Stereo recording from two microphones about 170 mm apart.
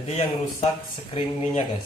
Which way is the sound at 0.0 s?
40° left (ahead or behind).